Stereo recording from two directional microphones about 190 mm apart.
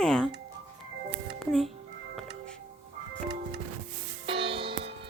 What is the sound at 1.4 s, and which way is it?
Speech, centre (ahead or behind).